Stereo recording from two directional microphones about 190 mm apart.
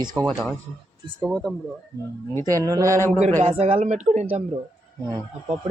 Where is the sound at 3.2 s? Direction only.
35° right (ahead or behind).